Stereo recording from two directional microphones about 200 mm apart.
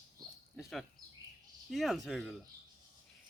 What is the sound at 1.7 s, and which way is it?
Speech, centre (ahead or behind).